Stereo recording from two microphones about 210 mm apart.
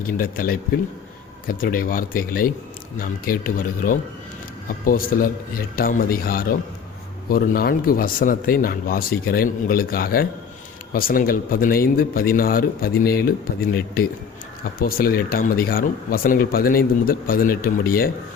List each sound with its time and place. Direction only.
0.2 s speech: 45° left (ahead or behind)